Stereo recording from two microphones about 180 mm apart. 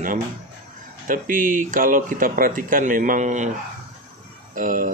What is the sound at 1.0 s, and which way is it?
Speech, 50° right (ahead or behind).